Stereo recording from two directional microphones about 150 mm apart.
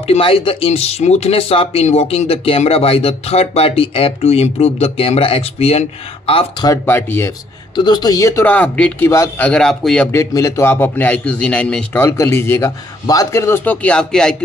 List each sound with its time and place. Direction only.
0.0 s speech: 40° left (ahead or behind)
6.7 s a man's voice: 15° left (ahead or behind)
7.7 s a man's voice: 30° left (ahead or behind)
9.5 s a man's voice: 5° left (ahead or behind)
10.1 s a man's voice: 20° left (ahead or behind); by 14.3 s 5° left (ahead or behind)